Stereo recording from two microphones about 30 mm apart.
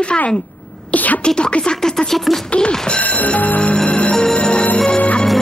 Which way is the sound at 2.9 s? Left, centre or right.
Left.